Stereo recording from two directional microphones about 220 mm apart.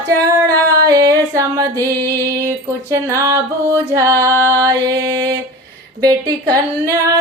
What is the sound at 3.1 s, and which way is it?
Music, 15° right (ahead or behind).